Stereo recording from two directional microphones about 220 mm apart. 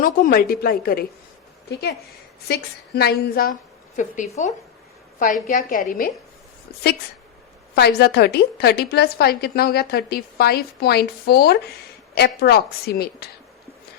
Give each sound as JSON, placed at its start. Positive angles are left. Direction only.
{"t": 0.0, "sound": "a woman's voice", "side_deg": 40}
{"t": 7.8, "sound": "a woman's voice", "side_deg": 50}